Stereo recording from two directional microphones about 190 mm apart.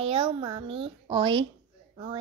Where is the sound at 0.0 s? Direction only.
30° right (ahead or behind).